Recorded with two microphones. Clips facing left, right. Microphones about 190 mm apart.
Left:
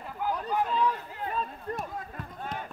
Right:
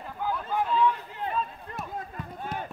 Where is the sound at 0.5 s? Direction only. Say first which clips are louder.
Right 1 dB; centre (ahead or behind).